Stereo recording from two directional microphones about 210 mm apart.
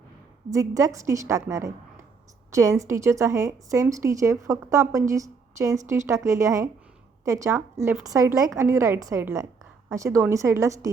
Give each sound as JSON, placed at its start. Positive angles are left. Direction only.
{"t": 0.5, "sound": "a woman's voice", "side_deg": -15}